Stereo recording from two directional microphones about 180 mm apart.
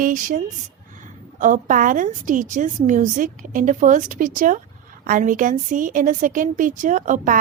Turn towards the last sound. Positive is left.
turn(degrees=-45)  # may be behind; listen again after turning